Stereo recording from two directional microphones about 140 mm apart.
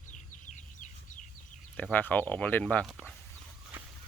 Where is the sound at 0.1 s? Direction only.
60° left (ahead or behind).